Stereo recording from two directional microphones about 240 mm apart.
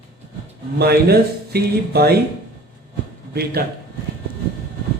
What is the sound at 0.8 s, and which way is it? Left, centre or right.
Speech, right.